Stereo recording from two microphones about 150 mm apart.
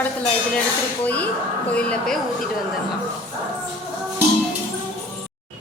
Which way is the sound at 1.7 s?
5° left (ahead or behind).